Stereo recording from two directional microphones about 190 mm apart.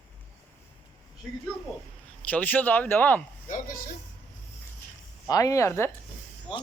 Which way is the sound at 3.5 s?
50° left (ahead or behind).